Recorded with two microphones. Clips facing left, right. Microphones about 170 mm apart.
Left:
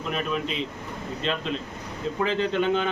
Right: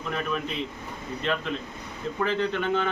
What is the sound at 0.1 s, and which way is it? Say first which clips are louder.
A man's voice: left 1 dB; 20° left (ahead or behind).